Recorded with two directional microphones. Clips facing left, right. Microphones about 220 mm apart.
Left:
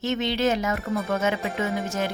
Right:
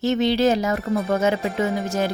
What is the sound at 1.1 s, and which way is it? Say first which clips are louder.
Speech: right 5 dB; 35° right (ahead or behind).